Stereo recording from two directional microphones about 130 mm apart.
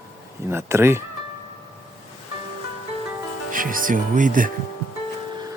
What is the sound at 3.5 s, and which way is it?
Speech, 90° right.